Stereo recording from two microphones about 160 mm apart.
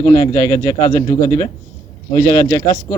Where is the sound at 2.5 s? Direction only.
25° left (ahead or behind).